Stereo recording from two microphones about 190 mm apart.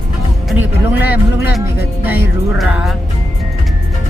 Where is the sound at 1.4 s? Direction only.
55° left (ahead or behind).